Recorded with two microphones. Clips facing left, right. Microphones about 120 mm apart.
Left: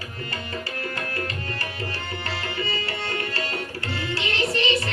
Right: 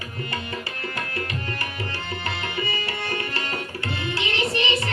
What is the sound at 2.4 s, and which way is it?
Tabla, 20° right (ahead or behind).